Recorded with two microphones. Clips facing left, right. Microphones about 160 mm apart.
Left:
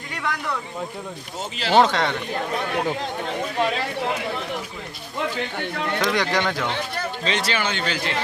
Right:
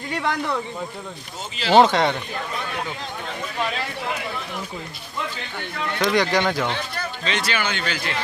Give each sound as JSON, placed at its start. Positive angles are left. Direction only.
{"t": 0.1, "sound": "a sound", "side_deg": -30}
{"t": 1.7, "sound": "speech", "side_deg": -15}
{"t": 2.5, "sound": "speech", "side_deg": 50}
{"t": 5.5, "sound": "speech", "side_deg": 55}
{"t": 6.0, "sound": "speech", "side_deg": 0}
{"t": 7.3, "sound": "a man's voice", "side_deg": 35}